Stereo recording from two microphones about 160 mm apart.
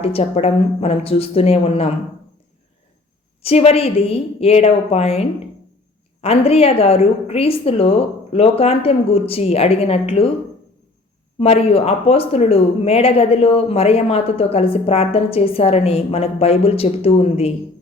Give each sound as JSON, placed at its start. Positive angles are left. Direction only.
{"t": 0.0, "sound": "speech", "side_deg": 40}
{"t": 3.4, "sound": "speech", "side_deg": 40}
{"t": 11.3, "sound": "speech", "side_deg": 40}